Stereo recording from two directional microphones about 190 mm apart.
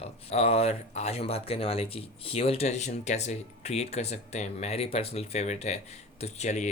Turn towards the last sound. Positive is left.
turn(degrees=35)  # may be behind; listen again after turning